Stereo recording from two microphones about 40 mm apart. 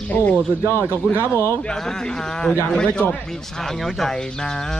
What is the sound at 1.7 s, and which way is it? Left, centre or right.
Speech, centre.